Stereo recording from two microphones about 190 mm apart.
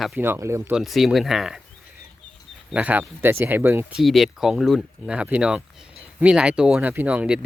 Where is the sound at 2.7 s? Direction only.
5° right (ahead or behind).